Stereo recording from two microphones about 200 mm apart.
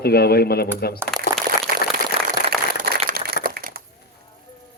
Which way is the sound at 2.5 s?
45° right (ahead or behind).